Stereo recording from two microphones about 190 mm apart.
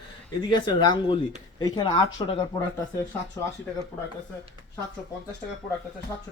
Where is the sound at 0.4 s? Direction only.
25° left (ahead or behind).